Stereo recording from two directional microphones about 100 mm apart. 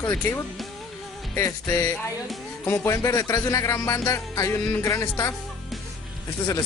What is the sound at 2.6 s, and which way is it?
Music, 25° left (ahead or behind).